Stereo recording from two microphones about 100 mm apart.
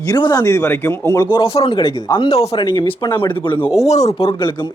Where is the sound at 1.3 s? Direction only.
70° left (ahead or behind).